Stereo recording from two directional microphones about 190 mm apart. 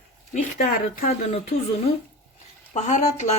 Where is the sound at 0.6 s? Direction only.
50° left (ahead or behind).